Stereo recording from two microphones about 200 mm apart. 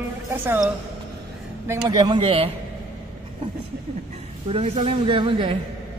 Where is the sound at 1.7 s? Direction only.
20° right (ahead or behind).